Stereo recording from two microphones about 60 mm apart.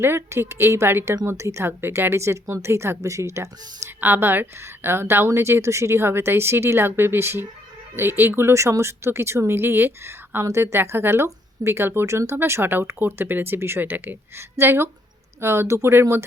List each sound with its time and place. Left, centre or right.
0.0 s a woman's voice: right
4.0 s a woman's voice: right